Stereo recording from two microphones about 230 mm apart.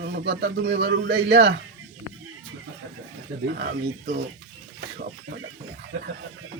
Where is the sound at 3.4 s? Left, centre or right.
Right.